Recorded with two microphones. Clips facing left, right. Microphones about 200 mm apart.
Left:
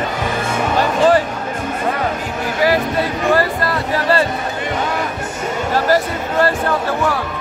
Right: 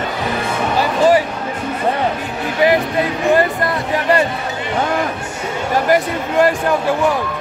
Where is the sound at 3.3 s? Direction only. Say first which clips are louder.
Right 2 dB; 20° right (ahead or behind).